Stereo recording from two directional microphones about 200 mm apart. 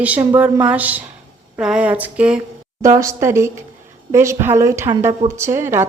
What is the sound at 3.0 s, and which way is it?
Speech, 15° right (ahead or behind).